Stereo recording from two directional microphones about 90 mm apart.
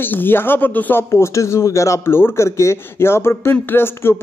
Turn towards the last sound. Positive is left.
turn(degrees=25)  # may be behind; listen again after turning